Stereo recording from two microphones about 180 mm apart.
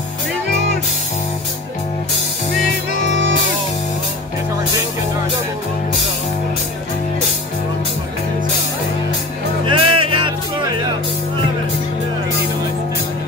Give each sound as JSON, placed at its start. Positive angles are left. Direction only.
{"t": 9.7, "sound": "music", "side_deg": -30}